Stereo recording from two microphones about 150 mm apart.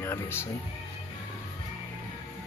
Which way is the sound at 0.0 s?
15° left (ahead or behind).